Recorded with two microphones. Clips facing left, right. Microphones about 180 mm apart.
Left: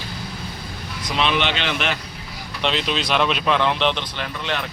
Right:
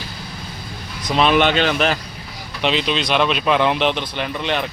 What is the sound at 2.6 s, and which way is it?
Speech, 5° right (ahead or behind).